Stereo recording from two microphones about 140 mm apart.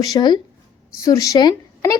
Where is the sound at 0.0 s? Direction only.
30° left (ahead or behind).